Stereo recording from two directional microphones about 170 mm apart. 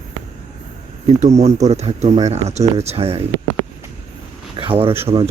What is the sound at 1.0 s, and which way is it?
Speech, 40° right (ahead or behind).